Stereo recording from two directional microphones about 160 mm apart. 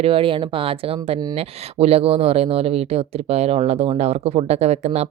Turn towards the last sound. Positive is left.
turn(degrees=-45)  # may be behind; listen again after turning